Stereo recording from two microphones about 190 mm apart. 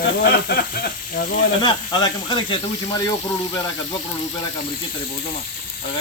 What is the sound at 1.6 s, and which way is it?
Speech, 20° left (ahead or behind).